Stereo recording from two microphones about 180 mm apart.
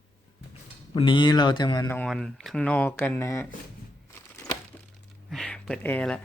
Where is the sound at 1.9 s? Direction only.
5° left (ahead or behind).